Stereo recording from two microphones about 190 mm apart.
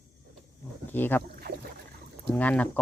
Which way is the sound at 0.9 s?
10° left (ahead or behind).